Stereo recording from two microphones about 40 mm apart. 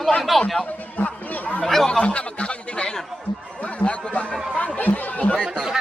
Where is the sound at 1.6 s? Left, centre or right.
Centre.